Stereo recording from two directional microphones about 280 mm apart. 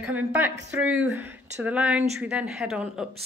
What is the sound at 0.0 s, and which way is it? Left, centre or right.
Speech, centre.